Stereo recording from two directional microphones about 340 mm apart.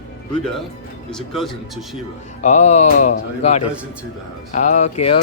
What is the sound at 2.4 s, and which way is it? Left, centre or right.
Speech, centre.